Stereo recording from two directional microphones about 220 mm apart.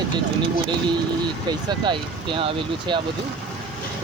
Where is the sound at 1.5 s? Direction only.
20° right (ahead or behind).